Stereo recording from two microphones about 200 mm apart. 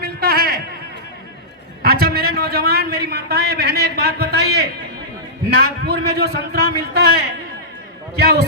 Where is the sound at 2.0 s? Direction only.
50° right (ahead or behind).